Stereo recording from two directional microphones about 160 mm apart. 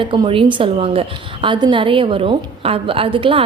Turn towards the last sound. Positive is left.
turn(degrees=-35)  # may be behind; listen again after turning